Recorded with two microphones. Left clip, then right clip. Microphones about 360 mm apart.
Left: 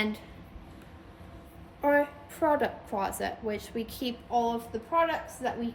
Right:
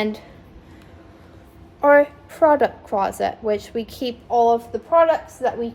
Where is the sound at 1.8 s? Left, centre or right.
Right.